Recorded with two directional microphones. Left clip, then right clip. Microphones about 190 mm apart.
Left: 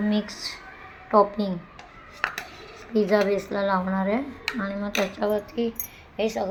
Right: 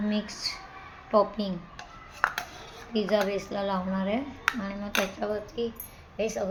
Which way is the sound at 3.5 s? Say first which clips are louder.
Left 6 dB; 10° left (ahead or behind).